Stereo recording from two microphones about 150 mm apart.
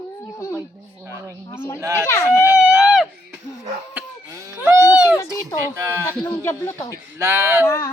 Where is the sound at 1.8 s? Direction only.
20° right (ahead or behind).